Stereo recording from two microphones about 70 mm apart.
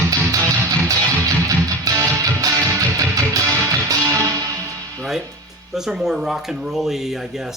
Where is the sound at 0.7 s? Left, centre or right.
Right.